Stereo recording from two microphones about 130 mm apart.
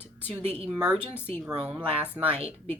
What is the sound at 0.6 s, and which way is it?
Speech, 5° right (ahead or behind).